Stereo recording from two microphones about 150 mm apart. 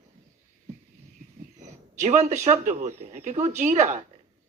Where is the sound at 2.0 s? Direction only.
50° right (ahead or behind).